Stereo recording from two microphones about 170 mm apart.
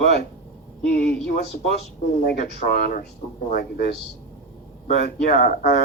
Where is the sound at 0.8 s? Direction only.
70° left (ahead or behind).